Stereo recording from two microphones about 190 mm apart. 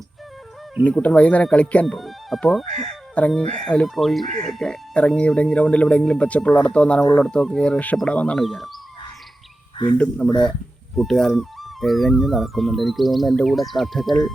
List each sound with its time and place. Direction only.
0.9 s speech: 5° left (ahead or behind)
2.9 s chicken: 5° left (ahead or behind)
3.7 s speech: 5° left (ahead or behind)
9.7 s speech: 25° left (ahead or behind)
10.9 s speech: centre (ahead or behind)